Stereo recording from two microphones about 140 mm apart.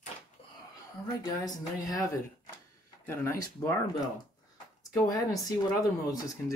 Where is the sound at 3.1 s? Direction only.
20° left (ahead or behind).